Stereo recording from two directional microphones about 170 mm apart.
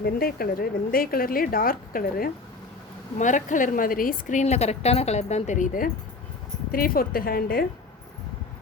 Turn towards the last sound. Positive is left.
turn(degrees=60)  # may be behind; listen again after turning